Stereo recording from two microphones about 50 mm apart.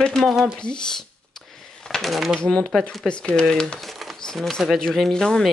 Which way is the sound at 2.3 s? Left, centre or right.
Centre.